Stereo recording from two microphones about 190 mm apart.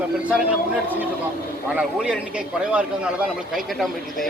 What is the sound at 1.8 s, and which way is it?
Speech, 5° right (ahead or behind).